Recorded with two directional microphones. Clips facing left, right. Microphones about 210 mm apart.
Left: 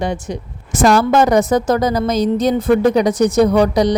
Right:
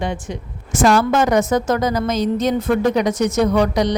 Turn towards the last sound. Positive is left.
turn(degrees=35)  # may be behind; listen again after turning